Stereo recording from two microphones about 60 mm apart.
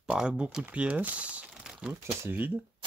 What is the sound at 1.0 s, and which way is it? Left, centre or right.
Crumpling, right.